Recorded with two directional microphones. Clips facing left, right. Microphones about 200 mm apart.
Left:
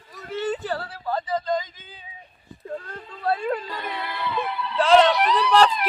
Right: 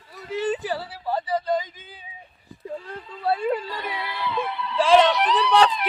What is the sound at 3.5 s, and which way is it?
Speech, centre (ahead or behind).